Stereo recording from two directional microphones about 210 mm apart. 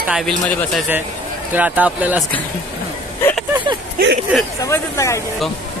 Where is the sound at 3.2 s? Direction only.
10° left (ahead or behind).